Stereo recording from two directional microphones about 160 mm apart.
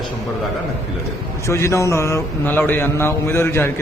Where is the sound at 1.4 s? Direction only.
15° left (ahead or behind).